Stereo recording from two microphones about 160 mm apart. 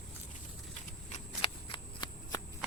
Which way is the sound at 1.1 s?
35° left (ahead or behind).